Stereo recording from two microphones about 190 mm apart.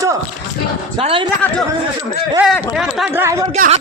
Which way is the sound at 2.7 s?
Centre (ahead or behind).